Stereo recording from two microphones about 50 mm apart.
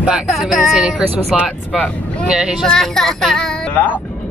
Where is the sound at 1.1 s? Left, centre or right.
Right.